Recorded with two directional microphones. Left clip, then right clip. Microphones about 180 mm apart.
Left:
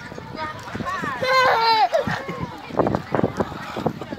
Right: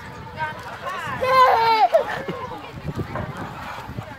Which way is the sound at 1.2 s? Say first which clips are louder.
Right 2 dB; 10° right (ahead or behind).